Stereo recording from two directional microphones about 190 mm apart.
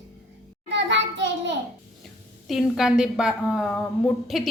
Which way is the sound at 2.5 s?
Centre (ahead or behind).